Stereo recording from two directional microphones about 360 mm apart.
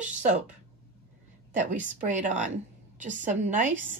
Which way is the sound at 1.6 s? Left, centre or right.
Right.